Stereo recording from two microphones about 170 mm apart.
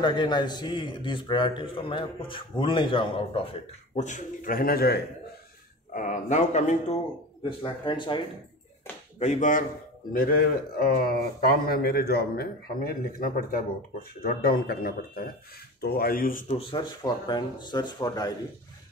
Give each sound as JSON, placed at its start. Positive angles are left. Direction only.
{"t": 0.0, "sound": "a man's voice", "side_deg": 25}
{"t": 3.9, "sound": "speech", "side_deg": 45}
{"t": 5.9, "sound": "a man's voice", "side_deg": 45}
{"t": 7.4, "sound": "a man's voice", "side_deg": 30}
{"t": 9.2, "sound": "a man's voice", "side_deg": 45}
{"t": 16.4, "sound": "a man's voice", "side_deg": 30}